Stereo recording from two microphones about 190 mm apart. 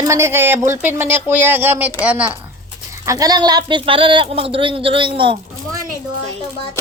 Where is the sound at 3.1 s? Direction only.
20° right (ahead or behind).